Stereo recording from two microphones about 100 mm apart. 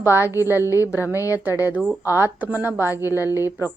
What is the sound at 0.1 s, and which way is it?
Speech, 25° right (ahead or behind).